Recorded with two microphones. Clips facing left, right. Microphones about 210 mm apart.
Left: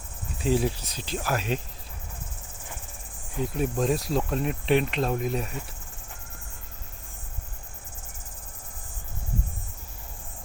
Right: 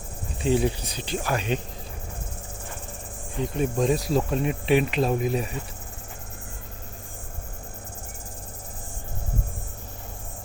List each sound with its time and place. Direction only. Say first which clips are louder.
0.3 s speech: right 2 dB; centre (ahead or behind)
3.3 s speech: right 2 dB; 5° left (ahead or behind)